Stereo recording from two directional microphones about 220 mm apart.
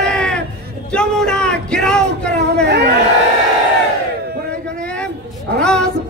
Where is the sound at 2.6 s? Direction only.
45° right (ahead or behind).